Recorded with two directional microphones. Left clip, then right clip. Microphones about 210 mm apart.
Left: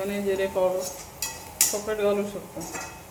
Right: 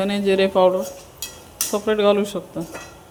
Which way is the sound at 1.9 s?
35° right (ahead or behind).